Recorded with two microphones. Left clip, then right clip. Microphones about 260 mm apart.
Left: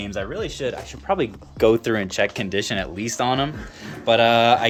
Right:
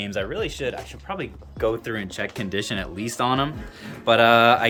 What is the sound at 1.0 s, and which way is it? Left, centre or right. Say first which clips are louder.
Speech: left 10 dB; left.